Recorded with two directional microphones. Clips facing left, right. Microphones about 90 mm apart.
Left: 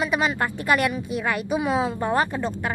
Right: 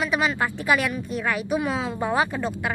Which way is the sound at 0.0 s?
Centre (ahead or behind).